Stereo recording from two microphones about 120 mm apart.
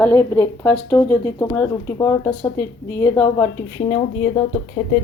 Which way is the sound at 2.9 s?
25° left (ahead or behind).